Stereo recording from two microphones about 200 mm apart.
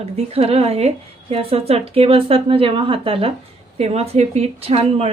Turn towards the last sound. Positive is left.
turn(degrees=-30)  # may be behind; listen again after turning